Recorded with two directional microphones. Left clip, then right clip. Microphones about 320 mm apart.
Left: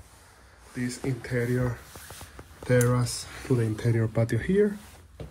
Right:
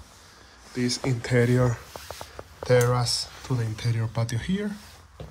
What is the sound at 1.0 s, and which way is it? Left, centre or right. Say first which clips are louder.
Speech: right 5 dB; centre.